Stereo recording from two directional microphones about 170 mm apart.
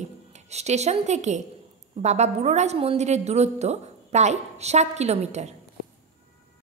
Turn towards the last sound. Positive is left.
turn(degrees=-40)  # may be behind; listen again after turning